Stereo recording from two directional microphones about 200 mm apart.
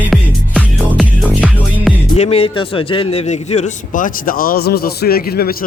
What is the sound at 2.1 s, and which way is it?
A man's voice, 30° left (ahead or behind).